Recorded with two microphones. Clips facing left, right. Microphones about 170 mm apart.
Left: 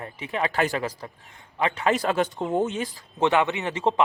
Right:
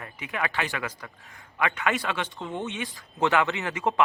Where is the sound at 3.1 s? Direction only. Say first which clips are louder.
Left 2 dB; 20° left (ahead or behind).